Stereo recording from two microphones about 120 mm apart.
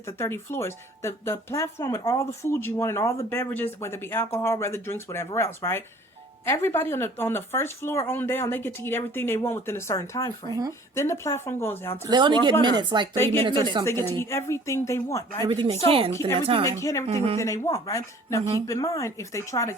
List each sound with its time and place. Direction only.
0.2 s a woman's voice: 20° left (ahead or behind)
12.0 s speech: 40° right (ahead or behind)
13.8 s a woman's voice: 20° left (ahead or behind)
15.4 s a woman's voice: 45° right (ahead or behind)
16.6 s a woman's voice: 25° left (ahead or behind)